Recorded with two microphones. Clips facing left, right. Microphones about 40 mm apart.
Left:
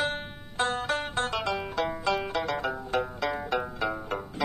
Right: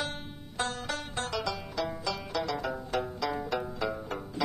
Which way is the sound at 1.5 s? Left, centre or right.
Left.